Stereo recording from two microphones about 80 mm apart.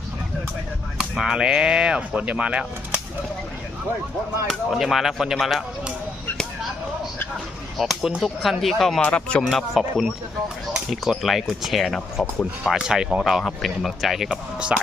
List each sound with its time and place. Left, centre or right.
0.9 s speech: centre
4.4 s speech: centre
7.8 s speech: centre
9.0 s speech: centre
9.5 s speech: centre
12.7 s speech: centre